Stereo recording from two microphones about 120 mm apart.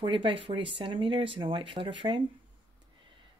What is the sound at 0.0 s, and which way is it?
Speech, 45° right (ahead or behind).